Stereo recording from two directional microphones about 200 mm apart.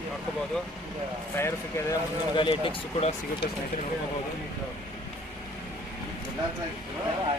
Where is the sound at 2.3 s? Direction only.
25° left (ahead or behind).